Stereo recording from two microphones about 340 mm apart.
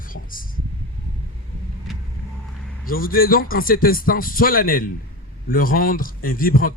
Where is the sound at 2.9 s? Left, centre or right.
Left.